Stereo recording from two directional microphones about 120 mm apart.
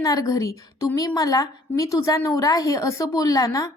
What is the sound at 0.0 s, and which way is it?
A woman's voice, 30° left (ahead or behind).